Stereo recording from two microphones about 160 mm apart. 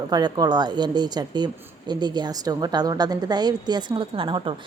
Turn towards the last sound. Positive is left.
turn(degrees=-30)  # may be behind; listen again after turning